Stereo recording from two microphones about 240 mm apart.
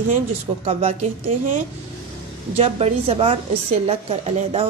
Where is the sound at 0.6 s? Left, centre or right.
Right.